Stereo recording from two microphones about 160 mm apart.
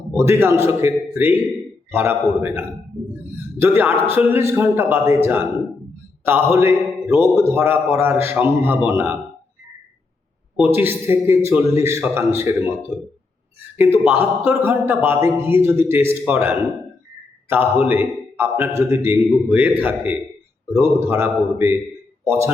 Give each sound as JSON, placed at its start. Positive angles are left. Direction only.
{"t": 0.1, "sound": "speech", "side_deg": -15}
{"t": 10.6, "sound": "speech", "side_deg": -15}
{"t": 13.7, "sound": "speech", "side_deg": -10}